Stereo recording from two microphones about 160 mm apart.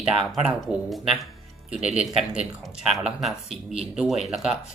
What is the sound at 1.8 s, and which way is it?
Speech, 40° right (ahead or behind).